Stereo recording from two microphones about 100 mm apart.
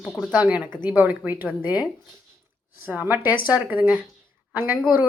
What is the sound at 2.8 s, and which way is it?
A woman's voice, 15° right (ahead or behind).